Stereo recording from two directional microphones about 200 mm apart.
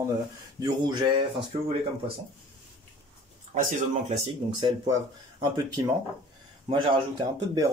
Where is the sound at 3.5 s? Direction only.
35° right (ahead or behind).